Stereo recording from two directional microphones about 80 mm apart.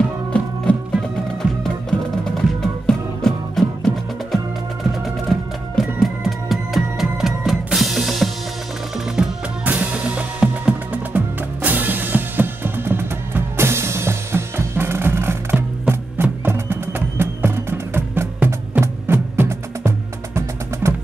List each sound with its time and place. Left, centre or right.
0.3 s music: centre
9.7 s music: centre; by 20.9 s right